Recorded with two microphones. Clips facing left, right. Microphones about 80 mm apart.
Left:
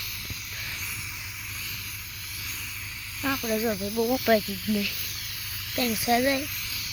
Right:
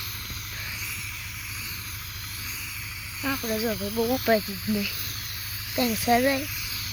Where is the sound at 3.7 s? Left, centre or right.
Right.